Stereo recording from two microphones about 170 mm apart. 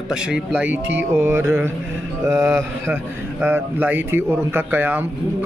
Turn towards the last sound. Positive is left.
turn(degrees=-10)  # may be behind; listen again after turning